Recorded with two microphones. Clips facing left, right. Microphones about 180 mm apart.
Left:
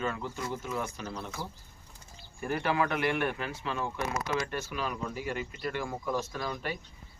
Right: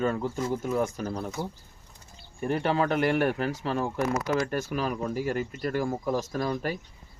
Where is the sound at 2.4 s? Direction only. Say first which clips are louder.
Right 4 dB; 30° right (ahead or behind).